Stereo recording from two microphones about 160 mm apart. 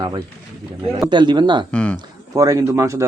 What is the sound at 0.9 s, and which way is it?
Speech, 25° right (ahead or behind).